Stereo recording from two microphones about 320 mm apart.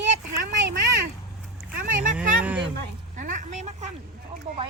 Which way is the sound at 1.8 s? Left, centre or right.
Right.